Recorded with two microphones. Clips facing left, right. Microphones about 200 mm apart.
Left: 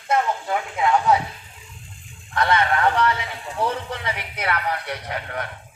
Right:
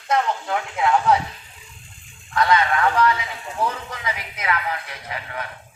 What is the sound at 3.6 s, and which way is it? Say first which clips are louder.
Speech: left 1 dB; 30° left (ahead or behind).